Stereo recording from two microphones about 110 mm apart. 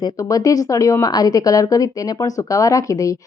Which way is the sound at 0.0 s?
30° left (ahead or behind).